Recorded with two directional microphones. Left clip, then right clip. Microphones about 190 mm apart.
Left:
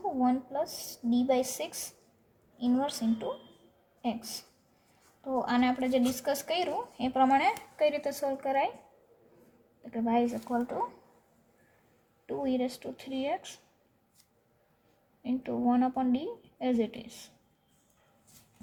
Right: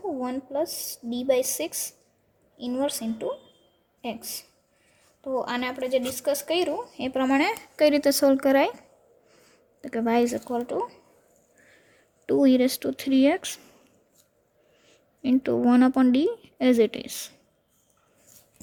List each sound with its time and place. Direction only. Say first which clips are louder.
0.2 s a woman's voice: even; 40° right (ahead or behind); by 8.7 s 60° right (ahead or behind)
9.8 s a woman's voice: right 6 dB; 60° right (ahead or behind)
12.2 s a woman's voice: right 11 dB; 65° right (ahead or behind)
15.2 s a woman's voice: right 9 dB; 60° right (ahead or behind)